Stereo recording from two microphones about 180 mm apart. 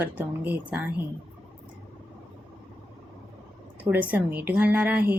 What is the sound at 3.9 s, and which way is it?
A woman's voice, 10° right (ahead or behind).